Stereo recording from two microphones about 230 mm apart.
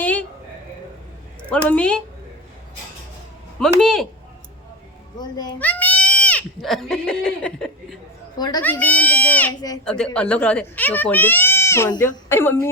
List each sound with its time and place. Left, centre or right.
0.0 s a sound: centre
1.5 s a woman's voice: centre
3.8 s a woman's voice: centre
5.1 s speech: centre
5.5 s speech: centre
8.4 s speech: centre
8.6 s speech: centre
9.8 s speech: centre